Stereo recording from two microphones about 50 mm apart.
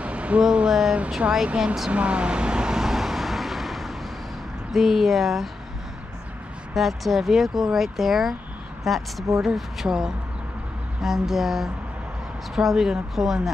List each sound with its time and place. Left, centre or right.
0.0 s a sound: right
0.4 s speech: centre
1.5 s speech: right
1.9 s vehicle: right; by 3.9 s centre
4.7 s speech: centre
6.7 s speech: centre